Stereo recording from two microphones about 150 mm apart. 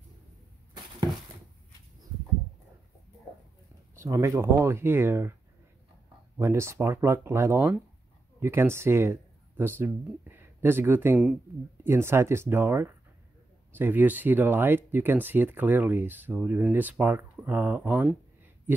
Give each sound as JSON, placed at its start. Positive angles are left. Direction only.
{"t": 3.9, "sound": "speech", "side_deg": -20}
{"t": 6.3, "sound": "speech", "side_deg": -15}